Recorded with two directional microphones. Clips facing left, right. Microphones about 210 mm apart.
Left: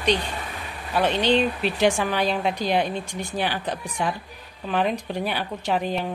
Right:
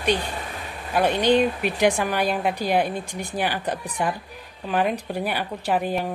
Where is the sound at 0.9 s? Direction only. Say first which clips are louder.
Right 2 dB; 10° right (ahead or behind).